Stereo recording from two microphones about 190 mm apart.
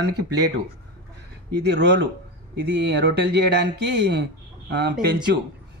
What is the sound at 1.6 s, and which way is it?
Speech, 65° right (ahead or behind).